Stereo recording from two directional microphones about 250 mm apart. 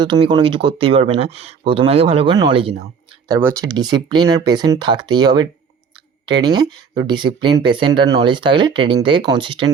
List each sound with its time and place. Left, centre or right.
0.0 s speech: centre